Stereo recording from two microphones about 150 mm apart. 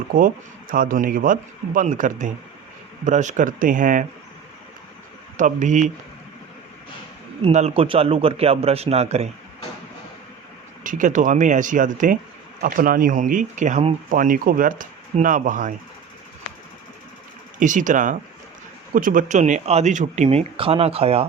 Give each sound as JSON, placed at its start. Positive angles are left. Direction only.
{"t": 0.1, "sound": "speech", "side_deg": -70}
{"t": 5.4, "sound": "speech", "side_deg": -55}
{"t": 7.4, "sound": "a man's voice", "side_deg": -40}
{"t": 10.8, "sound": "speech", "side_deg": -60}
{"t": 12.6, "sound": "speech", "side_deg": -70}
{"t": 14.1, "sound": "speech", "side_deg": -65}
{"t": 17.6, "sound": "speech", "side_deg": -55}